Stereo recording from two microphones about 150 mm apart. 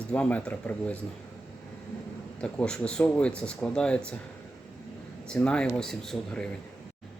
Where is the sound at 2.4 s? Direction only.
5° left (ahead or behind).